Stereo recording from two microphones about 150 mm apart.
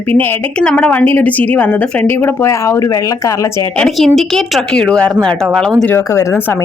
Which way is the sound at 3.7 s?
5° left (ahead or behind).